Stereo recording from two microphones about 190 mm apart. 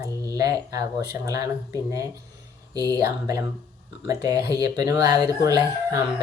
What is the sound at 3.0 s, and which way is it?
Speech, 15° right (ahead or behind).